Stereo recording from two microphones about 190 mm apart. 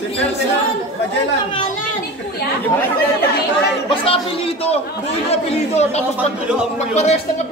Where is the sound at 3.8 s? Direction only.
30° left (ahead or behind).